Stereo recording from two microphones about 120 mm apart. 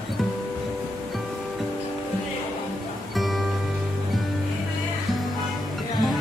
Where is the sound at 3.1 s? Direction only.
Centre (ahead or behind).